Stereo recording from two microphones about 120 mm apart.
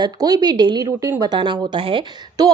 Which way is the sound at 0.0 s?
35° right (ahead or behind).